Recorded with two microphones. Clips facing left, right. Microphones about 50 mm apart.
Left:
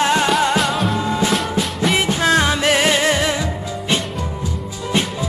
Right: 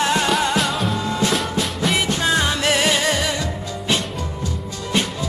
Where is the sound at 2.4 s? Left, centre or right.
Centre.